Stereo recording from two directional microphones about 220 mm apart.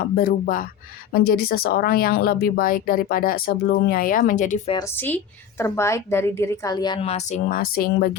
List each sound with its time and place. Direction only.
0.0 s speech: 45° left (ahead or behind)
4.7 s a woman's voice: 10° left (ahead or behind); by 8.1 s 40° left (ahead or behind)